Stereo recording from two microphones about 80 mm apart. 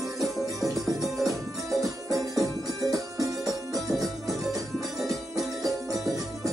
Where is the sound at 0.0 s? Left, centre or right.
Centre.